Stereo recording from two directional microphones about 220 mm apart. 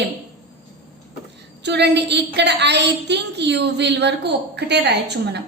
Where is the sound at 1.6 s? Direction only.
50° right (ahead or behind).